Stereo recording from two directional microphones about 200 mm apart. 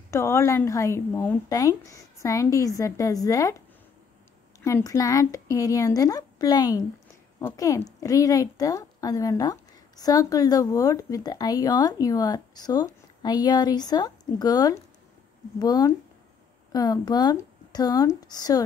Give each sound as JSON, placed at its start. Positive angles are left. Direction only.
{"t": 0.1, "sound": "a woman's voice", "side_deg": 15}
{"t": 4.6, "sound": "a woman's voice", "side_deg": 15}